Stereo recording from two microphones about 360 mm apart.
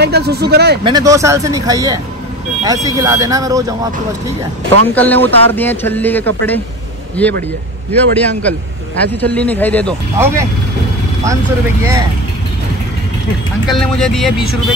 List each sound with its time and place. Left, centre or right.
0.0 s speech: right
0.8 s speech: centre
4.9 s a man's voice: centre
10.1 s speech: centre
13.7 s a man's voice: centre